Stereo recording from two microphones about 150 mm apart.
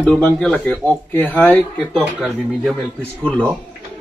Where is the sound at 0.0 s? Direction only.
10° left (ahead or behind).